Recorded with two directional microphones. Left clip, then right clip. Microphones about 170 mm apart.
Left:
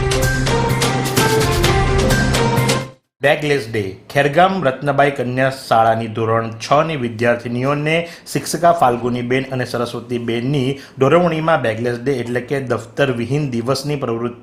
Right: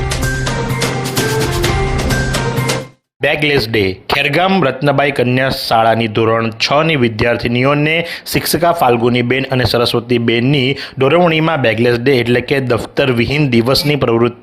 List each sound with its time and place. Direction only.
3.2 s speech: 25° right (ahead or behind)
8.3 s speech: 20° right (ahead or behind)